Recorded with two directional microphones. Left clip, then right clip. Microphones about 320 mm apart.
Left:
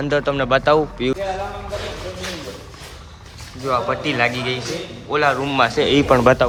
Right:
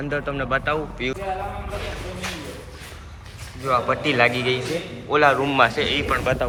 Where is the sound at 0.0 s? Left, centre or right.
Centre.